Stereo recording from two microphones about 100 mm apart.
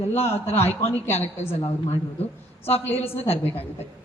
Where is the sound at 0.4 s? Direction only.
90° left.